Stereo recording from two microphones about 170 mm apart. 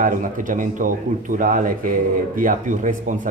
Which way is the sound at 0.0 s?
50° right (ahead or behind).